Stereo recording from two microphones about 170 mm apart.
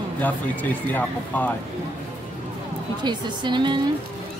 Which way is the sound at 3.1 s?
25° right (ahead or behind).